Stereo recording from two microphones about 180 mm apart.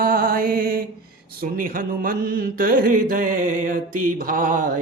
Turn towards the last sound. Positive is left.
turn(degrees=-45)  # may be behind; listen again after turning